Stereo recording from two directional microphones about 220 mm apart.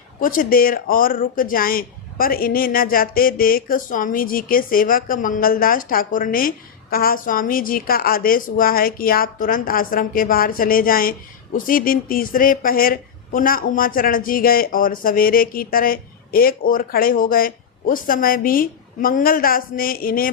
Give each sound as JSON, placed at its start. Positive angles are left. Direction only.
{"t": 0.2, "sound": "speech", "side_deg": 40}